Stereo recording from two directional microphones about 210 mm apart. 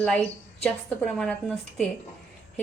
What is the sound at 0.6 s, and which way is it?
A woman's voice, 5° left (ahead or behind).